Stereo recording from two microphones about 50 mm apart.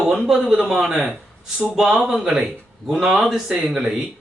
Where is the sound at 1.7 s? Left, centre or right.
Centre.